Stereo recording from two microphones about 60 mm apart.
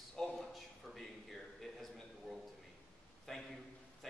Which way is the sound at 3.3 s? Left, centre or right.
Centre.